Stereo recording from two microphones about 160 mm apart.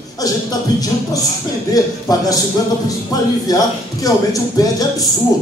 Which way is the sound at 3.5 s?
25° left (ahead or behind).